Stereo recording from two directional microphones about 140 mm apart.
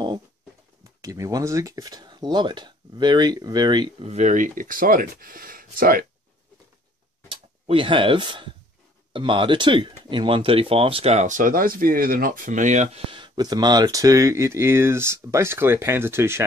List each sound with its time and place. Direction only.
1.0 s speech: 25° right (ahead or behind)
4.0 s speech: 55° right (ahead or behind); by 6.0 s 90° right
7.2 s speech: 40° right (ahead or behind); by 16.4 s 20° right (ahead or behind)